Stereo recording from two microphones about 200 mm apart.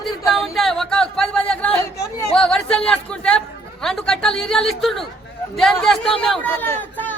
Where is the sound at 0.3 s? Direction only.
Centre (ahead or behind).